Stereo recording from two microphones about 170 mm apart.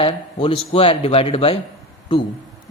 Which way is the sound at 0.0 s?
30° left (ahead or behind).